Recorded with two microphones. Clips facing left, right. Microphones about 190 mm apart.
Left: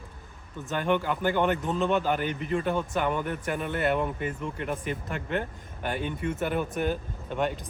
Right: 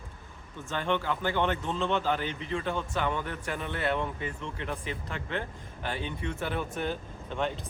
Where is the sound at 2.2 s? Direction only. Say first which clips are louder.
Left 5 dB; 50° left (ahead or behind).